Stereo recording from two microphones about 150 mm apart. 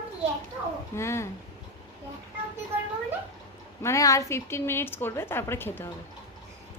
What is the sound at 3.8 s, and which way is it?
A woman's voice, 20° left (ahead or behind).